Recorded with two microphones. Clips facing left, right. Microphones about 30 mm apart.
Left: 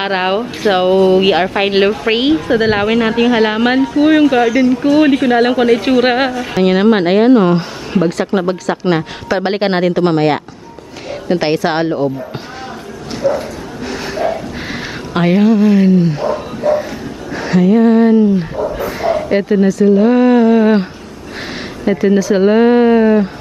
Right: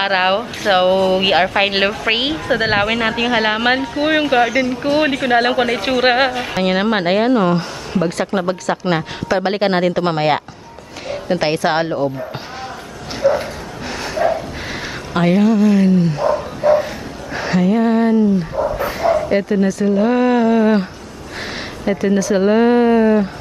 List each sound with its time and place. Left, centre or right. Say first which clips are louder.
0.0 s a woman's voice: even; centre
11.1 s speech: left 3 dB; centre
13.2 s a woman's voice: even; centre
13.8 s a sound: even; centre
16.6 s a woman's voice: right 1 dB; centre
17.3 s a sound: left 4 dB; centre
18.9 s dog: left 1 dB; centre
19.7 s speech: left 7 dB; centre